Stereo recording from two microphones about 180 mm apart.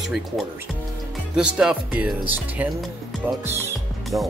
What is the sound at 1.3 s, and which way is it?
Speech, 5° right (ahead or behind).